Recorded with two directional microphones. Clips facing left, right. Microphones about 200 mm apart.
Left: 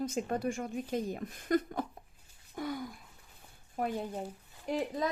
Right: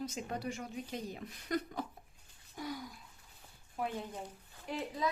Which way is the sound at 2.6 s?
55° left (ahead or behind).